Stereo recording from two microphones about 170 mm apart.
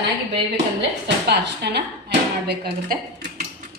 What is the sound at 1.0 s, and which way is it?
Speech, 85° right.